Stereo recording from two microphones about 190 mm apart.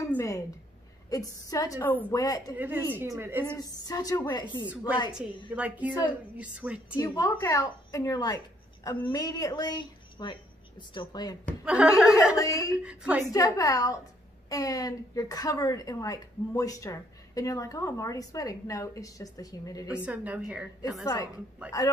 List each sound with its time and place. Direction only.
0.1 s a sound: 15° left (ahead or behind)
1.1 s a woman's voice: 20° left (ahead or behind)
2.2 s a woman's voice: 20° left (ahead or behind)
2.5 s a woman's voice: 10° right (ahead or behind)
3.5 s a woman's voice: 20° left (ahead or behind)
5.5 s a woman's voice: 5° right (ahead or behind)
7.0 s a woman's voice: 15° left (ahead or behind)
11.6 s speech: 5° right (ahead or behind)
12.4 s a woman's voice: 15° left (ahead or behind)
12.8 s speech: 5° right (ahead or behind)
13.3 s a woman's voice: 20° left (ahead or behind)
20.1 s a woman's voice: 5° right (ahead or behind)
21.0 s a woman's voice: 20° left (ahead or behind)